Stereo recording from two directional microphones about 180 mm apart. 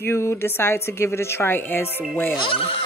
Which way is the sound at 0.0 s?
15° left (ahead or behind).